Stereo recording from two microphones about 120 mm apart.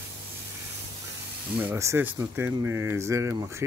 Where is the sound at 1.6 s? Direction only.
20° right (ahead or behind).